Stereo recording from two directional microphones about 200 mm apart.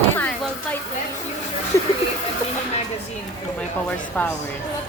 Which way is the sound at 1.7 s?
15° left (ahead or behind).